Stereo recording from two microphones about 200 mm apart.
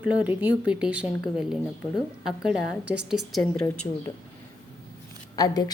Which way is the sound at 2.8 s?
60° right (ahead or behind).